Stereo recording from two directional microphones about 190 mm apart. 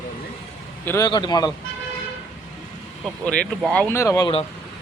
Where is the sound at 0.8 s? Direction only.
15° left (ahead or behind).